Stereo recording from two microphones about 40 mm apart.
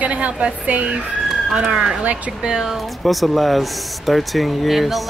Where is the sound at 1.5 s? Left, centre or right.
Centre.